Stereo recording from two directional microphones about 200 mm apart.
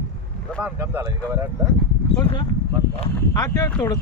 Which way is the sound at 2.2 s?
25° left (ahead or behind).